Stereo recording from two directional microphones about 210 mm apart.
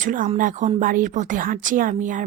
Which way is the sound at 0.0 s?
40° right (ahead or behind).